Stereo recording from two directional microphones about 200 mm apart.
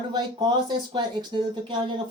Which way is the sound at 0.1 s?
20° right (ahead or behind).